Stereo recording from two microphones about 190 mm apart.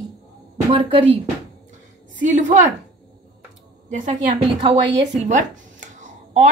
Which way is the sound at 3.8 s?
40° right (ahead or behind).